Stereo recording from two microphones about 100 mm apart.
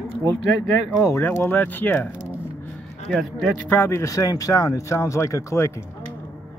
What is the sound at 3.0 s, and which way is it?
Speech, 5° left (ahead or behind).